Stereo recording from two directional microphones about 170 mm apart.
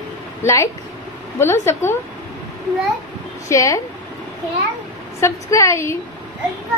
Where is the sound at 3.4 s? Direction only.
20° left (ahead or behind).